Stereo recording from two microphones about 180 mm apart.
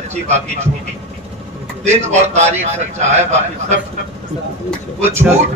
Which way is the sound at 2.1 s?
40° right (ahead or behind).